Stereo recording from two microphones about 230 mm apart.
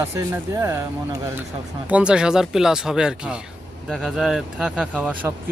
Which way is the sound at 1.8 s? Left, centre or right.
Centre.